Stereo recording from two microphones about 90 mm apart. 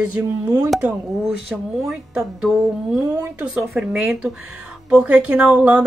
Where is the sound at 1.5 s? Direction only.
10° right (ahead or behind).